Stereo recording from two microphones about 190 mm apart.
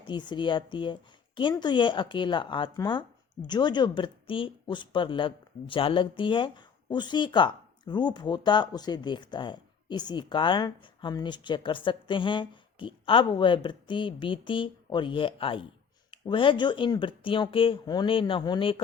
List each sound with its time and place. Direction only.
0.1 s speech: 25° left (ahead or behind)